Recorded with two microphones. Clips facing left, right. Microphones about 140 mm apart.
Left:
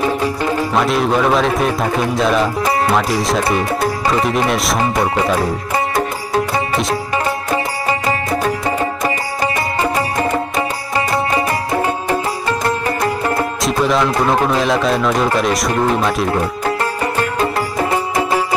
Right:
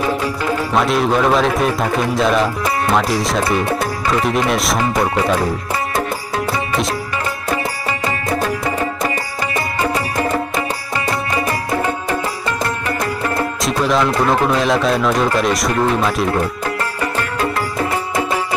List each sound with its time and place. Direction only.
0.7 s a man's voice: centre (ahead or behind)
3.4 s speech: 25° left (ahead or behind)
4.2 s a man's voice: centre (ahead or behind)
9.8 s music: 30° left (ahead or behind)
11.3 s music: 35° left (ahead or behind)
13.6 s a man's voice: centre (ahead or behind)
17.8 s music: 25° left (ahead or behind)